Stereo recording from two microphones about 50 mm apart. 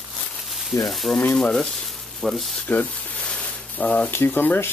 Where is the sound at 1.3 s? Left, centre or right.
Centre.